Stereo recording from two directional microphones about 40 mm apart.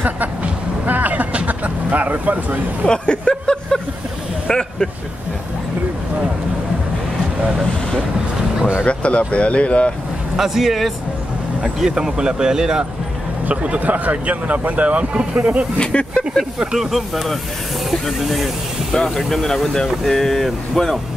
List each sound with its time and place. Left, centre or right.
0.0 s music: right
1.3 s speech: right
2.9 s speech: centre
4.5 s vehicle: centre
8.8 s speech: left
10.3 s speech: centre
11.9 s speech: centre
13.5 s speech: right
15.8 s speech: left
16.7 s speech: centre